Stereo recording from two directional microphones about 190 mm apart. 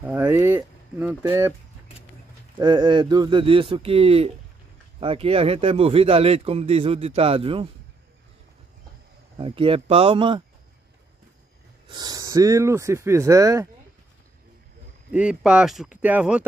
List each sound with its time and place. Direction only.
0.0 s speech: 10° right (ahead or behind)
2.5 s a man's voice: 25° right (ahead or behind)
9.4 s speech: 30° right (ahead or behind)
11.9 s speech: 20° right (ahead or behind)
15.1 s speech: 5° right (ahead or behind)